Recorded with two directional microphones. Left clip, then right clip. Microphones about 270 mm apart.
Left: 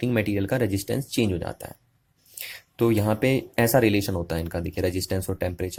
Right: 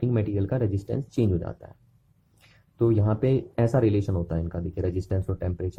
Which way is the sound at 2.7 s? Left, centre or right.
Centre.